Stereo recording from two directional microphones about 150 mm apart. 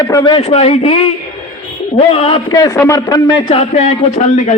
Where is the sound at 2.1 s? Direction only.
40° left (ahead or behind).